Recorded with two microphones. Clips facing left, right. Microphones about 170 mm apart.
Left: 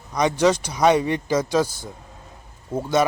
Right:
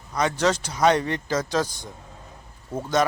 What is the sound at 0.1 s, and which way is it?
Speech, 15° left (ahead or behind).